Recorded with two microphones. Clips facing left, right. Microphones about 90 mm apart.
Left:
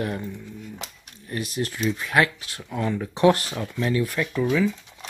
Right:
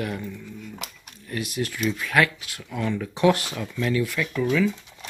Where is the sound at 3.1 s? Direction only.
35° left (ahead or behind).